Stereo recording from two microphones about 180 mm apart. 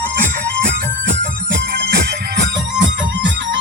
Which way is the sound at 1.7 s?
60° right (ahead or behind).